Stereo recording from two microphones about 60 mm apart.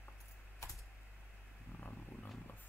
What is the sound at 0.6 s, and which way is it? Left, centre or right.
Typing, left.